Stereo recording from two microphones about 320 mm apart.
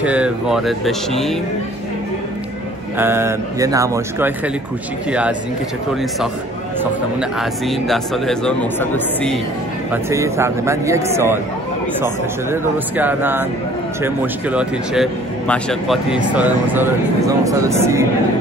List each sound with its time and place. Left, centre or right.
0.0 s speech: centre
3.0 s speech: centre
6.8 s speech: centre
10.0 s speech: centre